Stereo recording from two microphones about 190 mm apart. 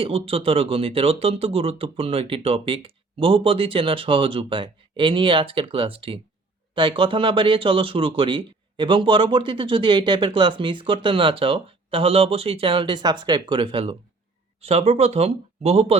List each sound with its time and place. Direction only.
0.0 s speech: 30° right (ahead or behind)